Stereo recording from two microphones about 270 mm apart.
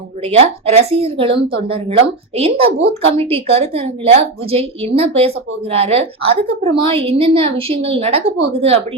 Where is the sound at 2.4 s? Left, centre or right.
Right.